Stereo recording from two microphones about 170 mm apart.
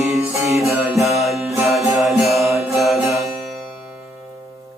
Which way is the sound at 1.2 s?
Centre (ahead or behind).